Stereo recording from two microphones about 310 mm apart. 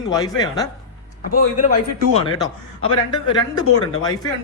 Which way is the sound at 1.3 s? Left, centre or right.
Left.